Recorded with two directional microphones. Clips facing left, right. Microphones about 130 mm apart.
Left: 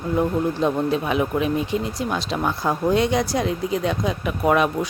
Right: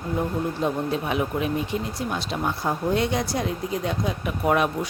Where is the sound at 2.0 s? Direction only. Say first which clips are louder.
Left 3 dB; 90° left.